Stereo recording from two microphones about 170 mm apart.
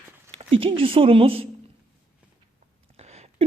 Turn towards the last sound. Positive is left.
turn(degrees=-40)  # may be behind; listen again after turning